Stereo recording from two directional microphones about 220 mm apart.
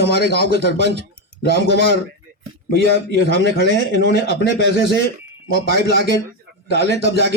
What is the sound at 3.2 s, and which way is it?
Speech, 50° left (ahead or behind).